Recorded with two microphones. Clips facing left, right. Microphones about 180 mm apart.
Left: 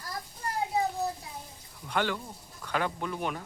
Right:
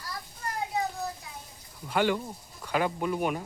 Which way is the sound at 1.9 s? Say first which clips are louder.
Right 4 dB; 15° right (ahead or behind).